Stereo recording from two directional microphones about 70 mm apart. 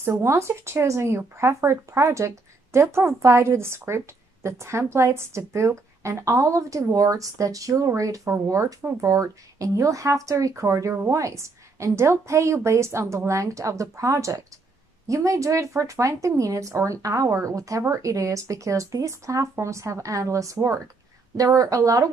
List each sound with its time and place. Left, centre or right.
0.2 s a woman's voice: right